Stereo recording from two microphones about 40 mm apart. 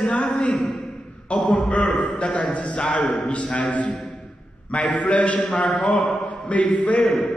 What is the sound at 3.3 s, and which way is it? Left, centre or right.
A man's voice, left.